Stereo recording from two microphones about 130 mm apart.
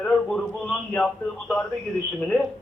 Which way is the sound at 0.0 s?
5° left (ahead or behind).